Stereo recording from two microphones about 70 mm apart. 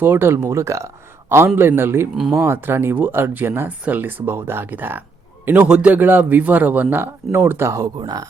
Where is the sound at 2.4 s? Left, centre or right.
Right.